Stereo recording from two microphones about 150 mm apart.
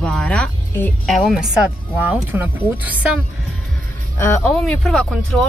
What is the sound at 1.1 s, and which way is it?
Speech, centre (ahead or behind).